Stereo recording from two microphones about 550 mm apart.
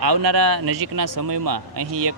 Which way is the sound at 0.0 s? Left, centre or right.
Right.